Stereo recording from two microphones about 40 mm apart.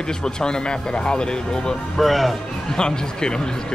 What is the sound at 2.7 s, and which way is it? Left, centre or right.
Speech, centre.